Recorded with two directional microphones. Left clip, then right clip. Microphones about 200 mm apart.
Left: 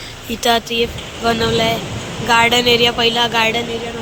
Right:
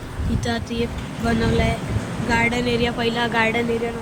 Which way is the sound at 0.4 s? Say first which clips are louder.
Left 11 dB; 5° right (ahead or behind).